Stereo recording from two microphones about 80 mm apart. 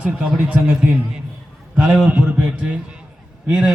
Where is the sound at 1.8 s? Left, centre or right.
Centre.